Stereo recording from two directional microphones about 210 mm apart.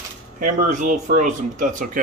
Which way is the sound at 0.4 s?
35° right (ahead or behind).